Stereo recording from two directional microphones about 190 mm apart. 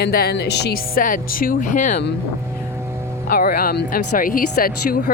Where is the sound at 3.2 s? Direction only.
50° left (ahead or behind).